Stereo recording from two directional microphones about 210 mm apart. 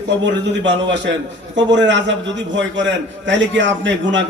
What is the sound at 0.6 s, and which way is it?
A man's voice, 60° right (ahead or behind).